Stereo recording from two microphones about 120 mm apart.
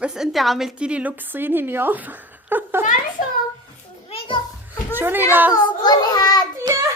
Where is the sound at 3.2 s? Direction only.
90° left.